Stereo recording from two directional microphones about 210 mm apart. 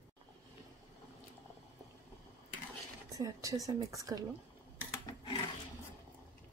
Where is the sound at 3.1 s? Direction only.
15° right (ahead or behind).